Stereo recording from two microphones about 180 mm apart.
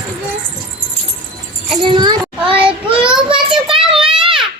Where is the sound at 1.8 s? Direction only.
25° right (ahead or behind).